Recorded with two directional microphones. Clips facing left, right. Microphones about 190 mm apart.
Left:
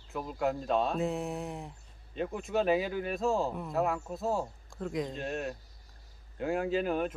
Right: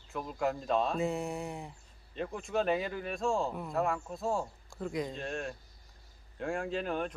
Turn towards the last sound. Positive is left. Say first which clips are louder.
# left 4 dB
turn(degrees=5)  # may be behind; listen again after turning